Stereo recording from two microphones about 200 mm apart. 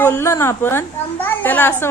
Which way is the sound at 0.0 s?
15° left (ahead or behind).